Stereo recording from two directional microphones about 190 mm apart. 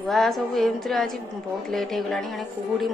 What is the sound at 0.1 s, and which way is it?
A woman's voice, centre (ahead or behind).